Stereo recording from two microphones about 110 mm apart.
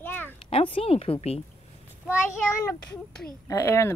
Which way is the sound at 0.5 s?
60° left (ahead or behind).